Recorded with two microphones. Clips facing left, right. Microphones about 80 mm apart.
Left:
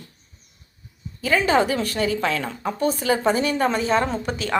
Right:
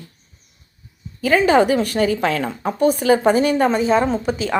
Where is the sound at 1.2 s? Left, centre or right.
Right.